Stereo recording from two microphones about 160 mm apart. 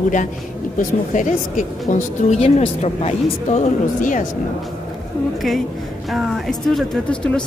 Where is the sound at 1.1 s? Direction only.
55° left (ahead or behind).